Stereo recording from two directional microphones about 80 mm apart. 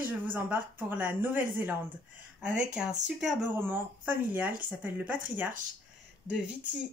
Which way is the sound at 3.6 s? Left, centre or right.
Right.